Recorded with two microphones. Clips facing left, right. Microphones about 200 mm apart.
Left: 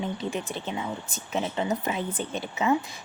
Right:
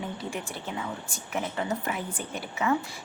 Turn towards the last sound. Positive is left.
turn(degrees=20)  # may be behind; listen again after turning